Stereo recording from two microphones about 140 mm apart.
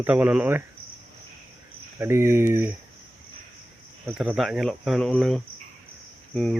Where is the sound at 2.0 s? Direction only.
20° right (ahead or behind).